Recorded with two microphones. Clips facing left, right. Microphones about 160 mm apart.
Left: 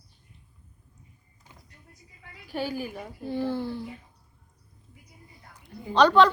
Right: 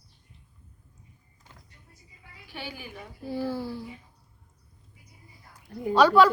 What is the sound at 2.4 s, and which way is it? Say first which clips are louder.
Speech: left 9 dB; 40° left (ahead or behind).